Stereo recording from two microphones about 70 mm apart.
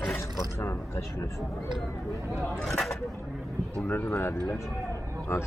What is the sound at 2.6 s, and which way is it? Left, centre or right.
Speech, centre.